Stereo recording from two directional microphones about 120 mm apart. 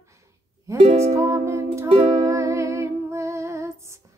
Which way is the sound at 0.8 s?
75° right (ahead or behind).